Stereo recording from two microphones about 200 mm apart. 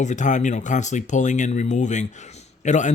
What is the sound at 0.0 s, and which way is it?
Speech, 40° left (ahead or behind).